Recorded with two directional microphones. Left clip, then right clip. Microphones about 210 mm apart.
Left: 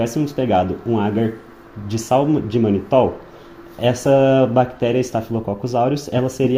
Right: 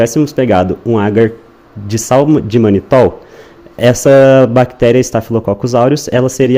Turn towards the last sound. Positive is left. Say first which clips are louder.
# right 9 dB
turn(degrees=-55)  # may be behind; listen again after turning